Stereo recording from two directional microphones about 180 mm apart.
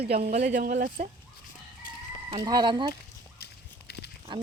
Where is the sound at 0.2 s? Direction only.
40° right (ahead or behind).